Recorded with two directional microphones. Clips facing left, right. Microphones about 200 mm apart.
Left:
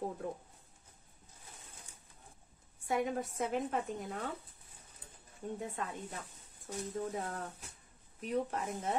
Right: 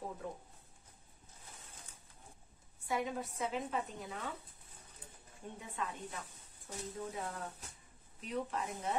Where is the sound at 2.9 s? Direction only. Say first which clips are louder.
Left 3 dB; 50° left (ahead or behind).